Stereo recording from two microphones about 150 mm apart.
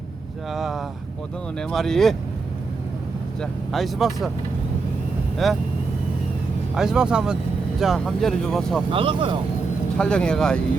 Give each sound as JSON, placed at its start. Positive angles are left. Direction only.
{"t": 0.5, "sound": "speech", "side_deg": 0}
{"t": 3.7, "sound": "speech", "side_deg": 0}
{"t": 5.4, "sound": "speech", "side_deg": 0}
{"t": 6.7, "sound": "speech", "side_deg": -5}
{"t": 8.9, "sound": "speech", "side_deg": -35}
{"t": 10.0, "sound": "speech", "side_deg": 5}